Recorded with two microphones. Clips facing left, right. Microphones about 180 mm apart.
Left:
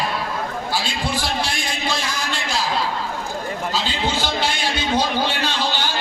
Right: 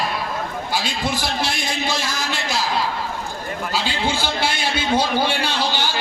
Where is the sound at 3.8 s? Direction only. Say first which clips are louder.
Right 2 dB; 10° right (ahead or behind).